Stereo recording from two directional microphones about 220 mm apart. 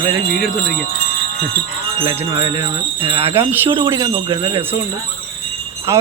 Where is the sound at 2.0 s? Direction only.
20° right (ahead or behind).